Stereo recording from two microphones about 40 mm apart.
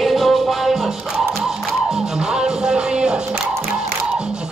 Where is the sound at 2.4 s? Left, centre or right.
Centre.